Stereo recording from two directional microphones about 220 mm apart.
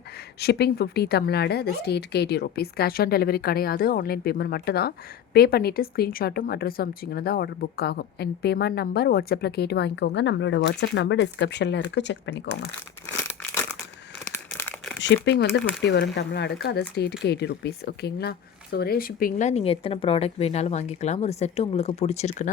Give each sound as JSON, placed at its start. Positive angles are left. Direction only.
{"t": 0.3, "sound": "a woman's voice", "side_deg": 45}
{"t": 13.2, "sound": "crumpling", "side_deg": 10}
{"t": 15.0, "sound": "a woman's voice", "side_deg": 55}